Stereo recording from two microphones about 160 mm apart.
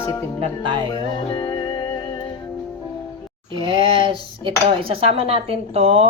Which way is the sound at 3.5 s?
30° right (ahead or behind).